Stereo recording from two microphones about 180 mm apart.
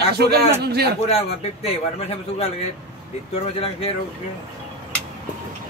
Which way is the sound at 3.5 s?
35° left (ahead or behind).